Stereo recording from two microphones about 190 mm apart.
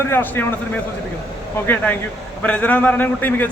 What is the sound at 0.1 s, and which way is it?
A man's voice, 10° left (ahead or behind).